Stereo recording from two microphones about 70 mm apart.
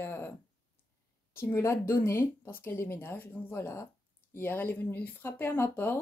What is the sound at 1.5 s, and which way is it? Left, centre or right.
Speech, left.